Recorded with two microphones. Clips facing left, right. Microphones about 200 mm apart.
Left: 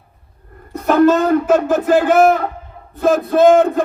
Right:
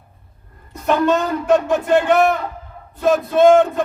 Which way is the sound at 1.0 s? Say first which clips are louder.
Left 6 dB; centre (ahead or behind).